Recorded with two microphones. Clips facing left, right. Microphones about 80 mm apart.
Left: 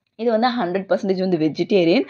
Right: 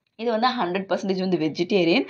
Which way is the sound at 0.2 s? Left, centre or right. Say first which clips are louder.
Left 4 dB; left.